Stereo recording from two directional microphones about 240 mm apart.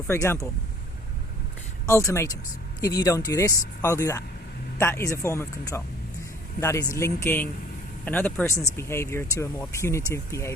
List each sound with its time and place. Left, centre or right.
0.1 s speech: centre
1.9 s speech: centre